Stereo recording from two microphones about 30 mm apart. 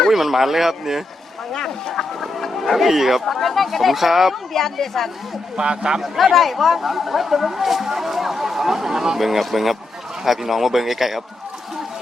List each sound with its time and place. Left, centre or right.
0.1 s speech: centre
1.5 s speech: centre
3.3 s speech: centre
4.5 s speech: centre
5.5 s a man's voice: right
6.0 s speech: centre
9.2 s speech: centre